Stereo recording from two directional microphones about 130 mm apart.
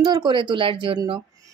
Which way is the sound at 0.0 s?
30° right (ahead or behind).